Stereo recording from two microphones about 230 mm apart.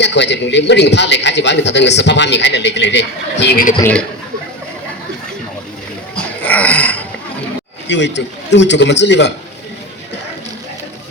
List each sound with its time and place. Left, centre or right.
0.0 s a man's voice: left
6.4 s a sound: centre
7.9 s a man's voice: left